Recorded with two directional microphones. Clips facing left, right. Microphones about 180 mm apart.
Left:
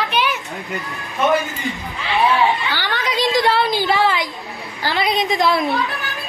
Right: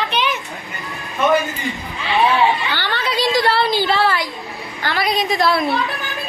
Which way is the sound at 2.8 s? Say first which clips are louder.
Even; 15° left (ahead or behind).